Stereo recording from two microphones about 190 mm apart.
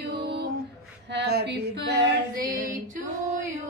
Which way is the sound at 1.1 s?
60° right (ahead or behind).